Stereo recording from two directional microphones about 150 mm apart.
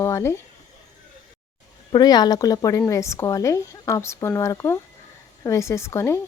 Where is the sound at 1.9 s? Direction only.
25° left (ahead or behind).